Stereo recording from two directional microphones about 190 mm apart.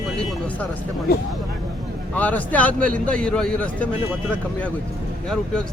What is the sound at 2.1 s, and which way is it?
A man's voice, 10° left (ahead or behind).